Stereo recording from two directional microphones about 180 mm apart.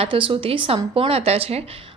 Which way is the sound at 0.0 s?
30° right (ahead or behind).